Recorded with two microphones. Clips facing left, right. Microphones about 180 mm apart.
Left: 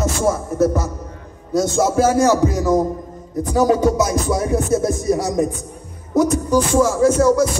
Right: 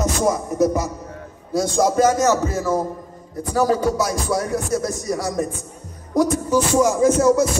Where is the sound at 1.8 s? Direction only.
5° left (ahead or behind).